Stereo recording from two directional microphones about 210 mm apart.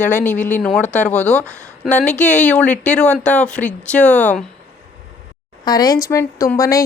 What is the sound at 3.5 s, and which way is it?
Speech, 5° left (ahead or behind).